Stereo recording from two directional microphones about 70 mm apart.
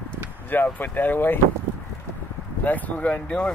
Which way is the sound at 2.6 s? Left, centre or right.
Left.